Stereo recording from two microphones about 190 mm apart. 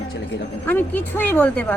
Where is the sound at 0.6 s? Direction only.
10° left (ahead or behind).